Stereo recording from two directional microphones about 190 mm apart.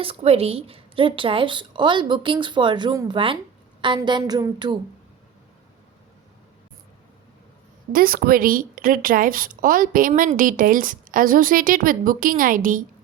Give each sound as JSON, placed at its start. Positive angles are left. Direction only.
{"t": 0.0, "sound": "a woman's voice", "side_deg": -30}
{"t": 7.9, "sound": "a woman's voice", "side_deg": -50}